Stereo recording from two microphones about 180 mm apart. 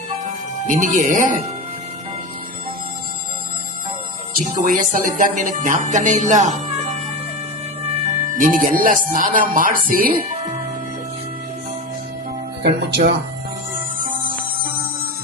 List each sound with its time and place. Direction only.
0.7 s speech: 45° right (ahead or behind)
4.4 s speech: 45° right (ahead or behind)
8.3 s speech: 45° right (ahead or behind)
12.6 s speech: 70° right (ahead or behind)